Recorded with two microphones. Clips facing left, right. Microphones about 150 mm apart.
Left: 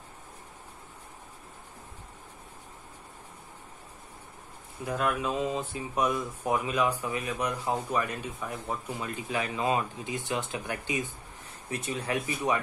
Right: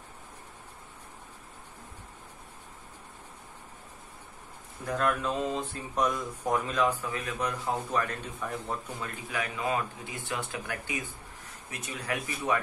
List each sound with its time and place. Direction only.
4.8 s speech: 5° left (ahead or behind)
9.3 s speech: 25° left (ahead or behind)